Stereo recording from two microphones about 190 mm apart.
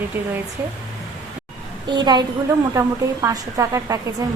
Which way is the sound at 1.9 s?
20° right (ahead or behind).